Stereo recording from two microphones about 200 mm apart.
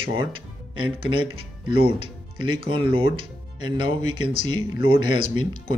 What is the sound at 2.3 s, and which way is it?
Speech, 25° right (ahead or behind).